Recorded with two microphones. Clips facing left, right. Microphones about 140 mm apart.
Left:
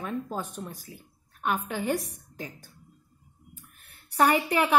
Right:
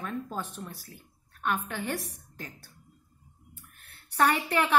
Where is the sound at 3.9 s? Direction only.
10° left (ahead or behind).